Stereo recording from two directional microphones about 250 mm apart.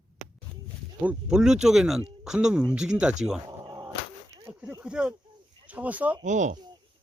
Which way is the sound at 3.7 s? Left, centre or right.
Centre.